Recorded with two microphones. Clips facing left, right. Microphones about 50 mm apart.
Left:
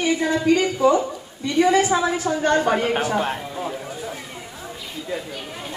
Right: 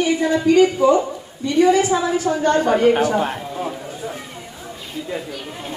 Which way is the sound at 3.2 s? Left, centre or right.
Centre.